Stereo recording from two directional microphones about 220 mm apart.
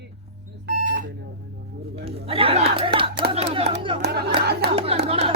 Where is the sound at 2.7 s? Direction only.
25° right (ahead or behind).